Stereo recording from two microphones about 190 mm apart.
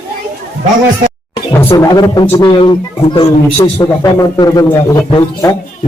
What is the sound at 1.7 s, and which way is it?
A man's voice, 20° left (ahead or behind).